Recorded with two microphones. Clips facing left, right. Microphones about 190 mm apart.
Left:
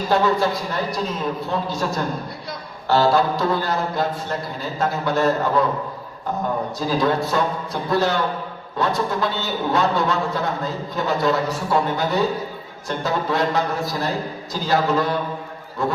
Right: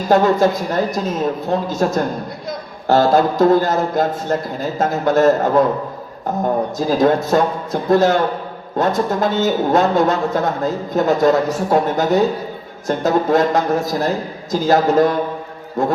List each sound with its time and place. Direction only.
0.1 s a man's voice: 45° right (ahead or behind)